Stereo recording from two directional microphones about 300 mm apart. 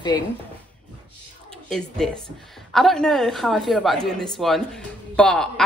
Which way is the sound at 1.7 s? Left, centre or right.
Centre.